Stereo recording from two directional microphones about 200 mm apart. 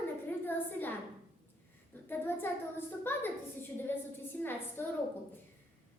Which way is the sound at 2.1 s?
10° left (ahead or behind).